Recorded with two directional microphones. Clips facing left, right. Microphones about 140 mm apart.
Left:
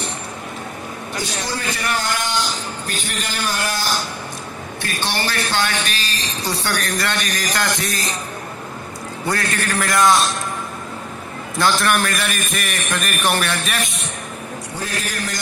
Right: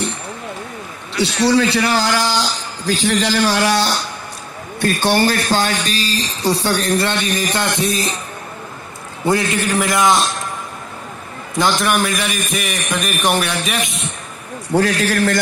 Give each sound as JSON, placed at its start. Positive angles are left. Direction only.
{"t": 1.1, "sound": "a man's voice", "side_deg": -75}
{"t": 4.8, "sound": "speech", "side_deg": -45}
{"t": 9.2, "sound": "a man's voice", "side_deg": -20}
{"t": 11.8, "sound": "a man's voice", "side_deg": -5}
{"t": 14.7, "sound": "a man's voice", "side_deg": -80}